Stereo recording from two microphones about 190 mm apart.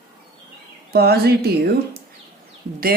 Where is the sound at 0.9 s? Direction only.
55° right (ahead or behind).